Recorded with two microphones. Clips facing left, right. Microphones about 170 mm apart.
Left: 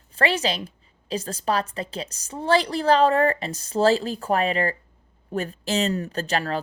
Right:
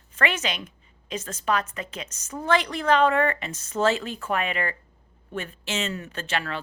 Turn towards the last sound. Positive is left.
turn(degrees=40)  # may be behind; listen again after turning